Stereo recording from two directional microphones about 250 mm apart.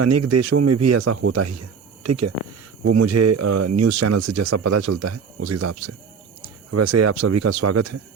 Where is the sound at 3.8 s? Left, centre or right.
Right.